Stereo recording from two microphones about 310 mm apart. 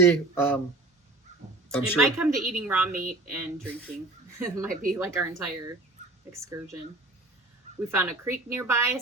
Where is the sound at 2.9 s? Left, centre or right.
Right.